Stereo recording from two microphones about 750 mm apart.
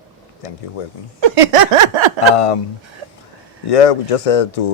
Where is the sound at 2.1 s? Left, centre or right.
Left.